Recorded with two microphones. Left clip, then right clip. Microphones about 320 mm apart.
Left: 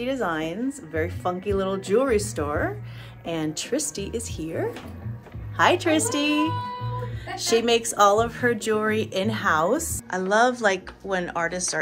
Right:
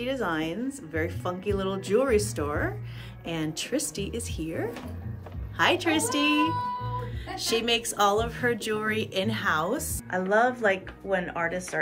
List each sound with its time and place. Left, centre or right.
0.0 s a woman's voice: centre